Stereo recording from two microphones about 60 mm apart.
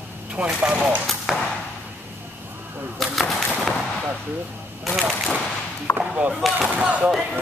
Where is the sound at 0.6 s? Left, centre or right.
Right.